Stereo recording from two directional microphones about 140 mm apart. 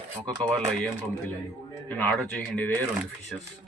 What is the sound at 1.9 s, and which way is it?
Speech, 10° left (ahead or behind).